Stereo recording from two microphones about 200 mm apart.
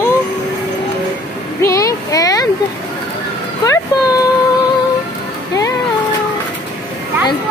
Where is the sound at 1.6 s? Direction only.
15° left (ahead or behind).